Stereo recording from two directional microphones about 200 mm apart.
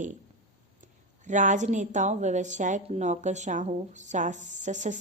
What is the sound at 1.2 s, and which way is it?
A woman's voice, 40° right (ahead or behind).